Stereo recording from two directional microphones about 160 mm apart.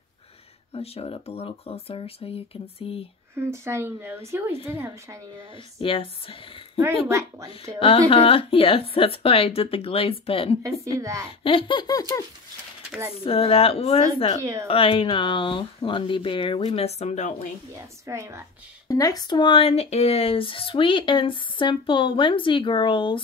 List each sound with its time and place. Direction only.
0.7 s speech: 35° left (ahead or behind)
3.3 s speech: 15° right (ahead or behind)
5.8 s speech: 35° left (ahead or behind)
7.1 s speech: 20° right (ahead or behind)
7.8 s speech: 35° left (ahead or behind)
10.8 s speech: 20° right (ahead or behind)
11.4 s laughter: 30° left (ahead or behind)
13.2 s speech: 35° left (ahead or behind)
14.4 s speech: 20° right (ahead or behind)
14.7 s speech: 35° left (ahead or behind)
17.7 s speech: 20° right (ahead or behind)
18.9 s speech: 20° left (ahead or behind)